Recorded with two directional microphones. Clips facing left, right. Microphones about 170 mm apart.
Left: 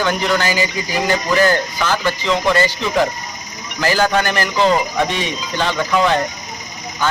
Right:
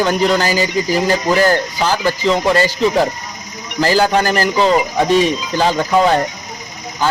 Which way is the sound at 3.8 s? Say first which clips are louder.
Right 3 dB; 35° right (ahead or behind).